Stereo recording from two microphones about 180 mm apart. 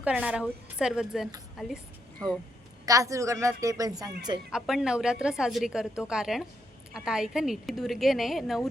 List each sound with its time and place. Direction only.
0.0 s a woman's voice: 5° right (ahead or behind)
2.8 s a woman's voice: 20° right (ahead or behind)
4.5 s a woman's voice: 5° right (ahead or behind)